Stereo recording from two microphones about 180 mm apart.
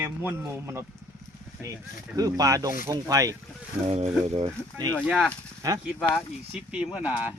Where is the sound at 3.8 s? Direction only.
35° right (ahead or behind).